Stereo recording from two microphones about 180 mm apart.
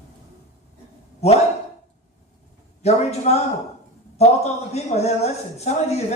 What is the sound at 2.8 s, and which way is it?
A man's voice, 35° left (ahead or behind).